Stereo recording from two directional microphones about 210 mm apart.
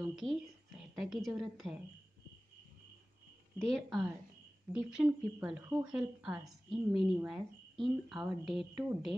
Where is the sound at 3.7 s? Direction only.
Centre (ahead or behind).